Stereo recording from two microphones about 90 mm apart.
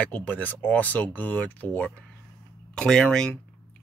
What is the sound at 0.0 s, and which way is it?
Speech, 15° left (ahead or behind).